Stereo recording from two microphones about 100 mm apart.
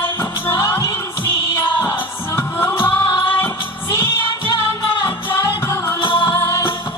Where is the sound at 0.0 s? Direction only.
25° left (ahead or behind).